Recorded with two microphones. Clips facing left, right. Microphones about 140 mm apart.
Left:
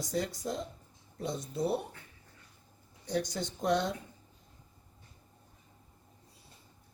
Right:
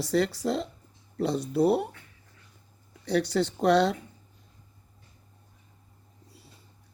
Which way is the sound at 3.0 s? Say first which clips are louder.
Right 8 dB; 70° right (ahead or behind).